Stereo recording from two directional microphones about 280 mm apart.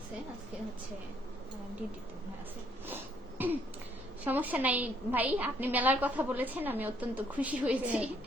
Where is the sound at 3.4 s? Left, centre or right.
Centre.